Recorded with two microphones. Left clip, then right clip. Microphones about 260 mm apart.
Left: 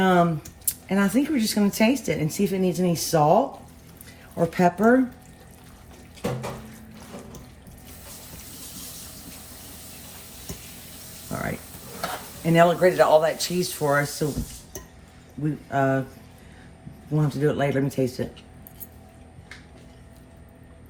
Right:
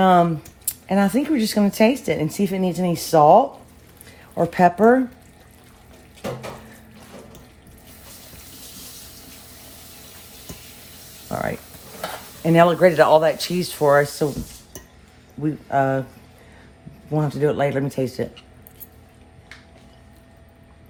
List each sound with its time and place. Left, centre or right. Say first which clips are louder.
0.0 s a sound: right 5 dB; right
0.9 s speech: right 4 dB; right
4.4 s speech: right 5 dB; right
12.4 s speech: right 4 dB; right
15.7 s speech: right 3 dB; right
17.1 s speech: right 4 dB; right